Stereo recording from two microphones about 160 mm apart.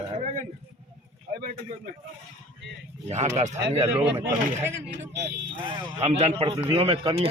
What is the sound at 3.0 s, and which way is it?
A man's voice, 45° right (ahead or behind).